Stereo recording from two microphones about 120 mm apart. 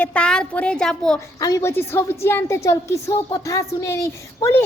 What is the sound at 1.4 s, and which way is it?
Speech, 30° left (ahead or behind).